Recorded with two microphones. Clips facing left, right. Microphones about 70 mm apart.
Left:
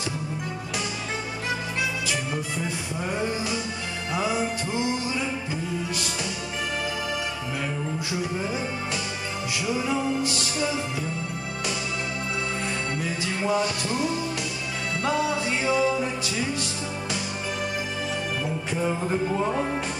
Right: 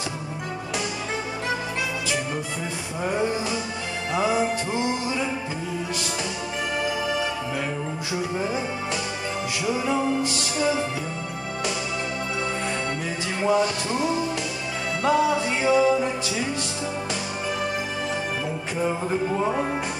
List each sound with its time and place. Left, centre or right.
3.0 s music: centre
9.7 s music: centre
13.4 s music: centre
18.8 s music: centre